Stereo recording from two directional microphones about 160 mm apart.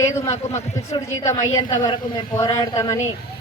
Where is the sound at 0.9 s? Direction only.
20° left (ahead or behind).